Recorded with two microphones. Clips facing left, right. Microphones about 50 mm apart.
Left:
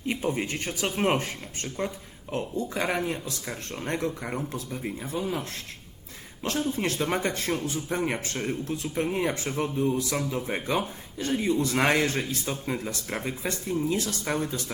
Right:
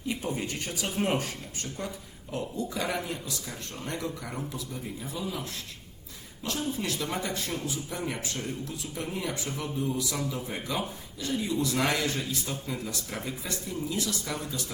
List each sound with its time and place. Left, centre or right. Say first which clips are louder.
0.1 s speech: left 4 dB; left